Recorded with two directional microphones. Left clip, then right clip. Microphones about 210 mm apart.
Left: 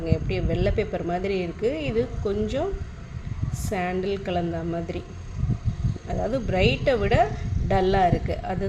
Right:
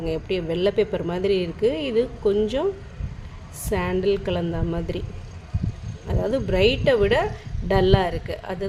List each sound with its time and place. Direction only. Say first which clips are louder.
0.0 s speech: right 3 dB; 20° right (ahead or behind)
3.7 s speech: right 4 dB; 20° right (ahead or behind)
6.1 s speech: right 3 dB; 20° right (ahead or behind)